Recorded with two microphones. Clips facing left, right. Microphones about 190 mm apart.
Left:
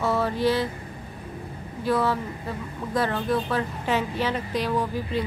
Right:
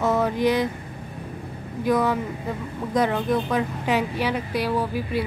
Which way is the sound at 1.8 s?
15° right (ahead or behind).